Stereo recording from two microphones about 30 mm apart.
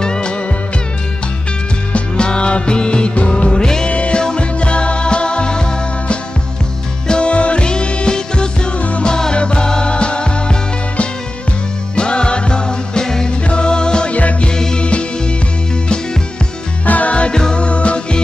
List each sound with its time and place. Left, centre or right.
0.0 s music: left
2.1 s music: left
8.7 s music: left
9.0 s music: left
14.1 s music: left
14.8 s music: left
16.8 s music: left
17.3 s music: left
17.6 s music: left